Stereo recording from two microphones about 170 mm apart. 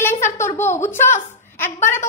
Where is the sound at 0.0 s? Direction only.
15° left (ahead or behind).